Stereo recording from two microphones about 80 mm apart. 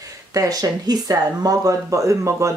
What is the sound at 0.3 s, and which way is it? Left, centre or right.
Speech, right.